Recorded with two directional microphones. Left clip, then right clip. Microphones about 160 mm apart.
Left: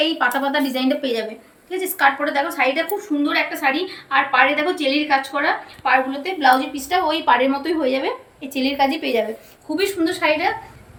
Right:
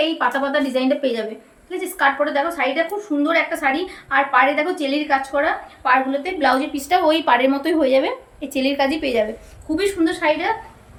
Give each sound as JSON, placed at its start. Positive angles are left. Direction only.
{"t": 0.0, "sound": "a woman's voice", "side_deg": -30}
{"t": 1.7, "sound": "a woman's voice", "side_deg": -20}
{"t": 3.2, "sound": "a woman's voice", "side_deg": -40}
{"t": 6.2, "sound": "a woman's voice", "side_deg": -70}
{"t": 9.7, "sound": "a woman's voice", "side_deg": -35}